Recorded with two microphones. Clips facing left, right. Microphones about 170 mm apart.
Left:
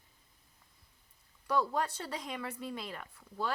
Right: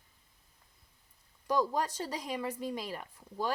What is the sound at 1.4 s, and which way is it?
Speech, 15° right (ahead or behind).